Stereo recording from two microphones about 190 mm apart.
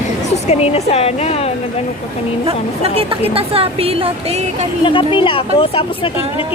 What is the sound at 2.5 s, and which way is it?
Speech, 30° right (ahead or behind).